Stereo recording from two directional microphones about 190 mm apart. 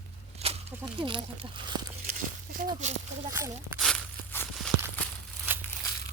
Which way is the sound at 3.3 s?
15° right (ahead or behind).